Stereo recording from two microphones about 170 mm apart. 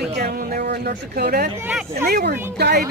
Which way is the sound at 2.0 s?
70° right (ahead or behind).